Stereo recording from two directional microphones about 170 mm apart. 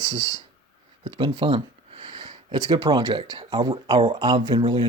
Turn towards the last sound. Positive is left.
turn(degrees=-30)  # may be behind; listen again after turning